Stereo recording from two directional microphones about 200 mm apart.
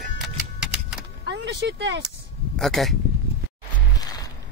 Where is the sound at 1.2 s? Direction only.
60° right (ahead or behind).